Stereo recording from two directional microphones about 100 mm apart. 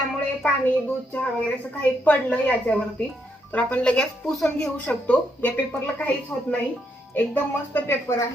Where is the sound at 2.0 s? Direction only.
15° left (ahead or behind).